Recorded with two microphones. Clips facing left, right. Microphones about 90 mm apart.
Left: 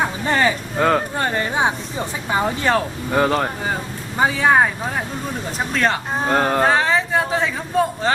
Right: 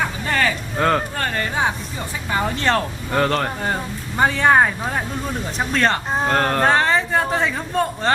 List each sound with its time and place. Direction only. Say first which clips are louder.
0.0 s a sound: left 2 dB; 20° left (ahead or behind)
0.7 s speech: left 1 dB; centre (ahead or behind)
1.1 s speech: left 2 dB; 20° left (ahead or behind); by 8.1 s 5° left (ahead or behind)